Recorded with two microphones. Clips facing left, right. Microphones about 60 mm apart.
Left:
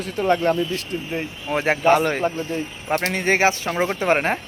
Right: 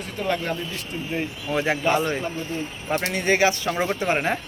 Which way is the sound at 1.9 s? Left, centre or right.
Left.